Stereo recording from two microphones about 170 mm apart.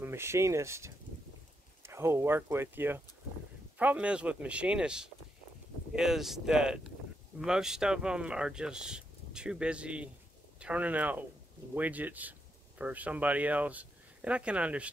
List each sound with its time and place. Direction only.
0.0 s speech: 15° right (ahead or behind)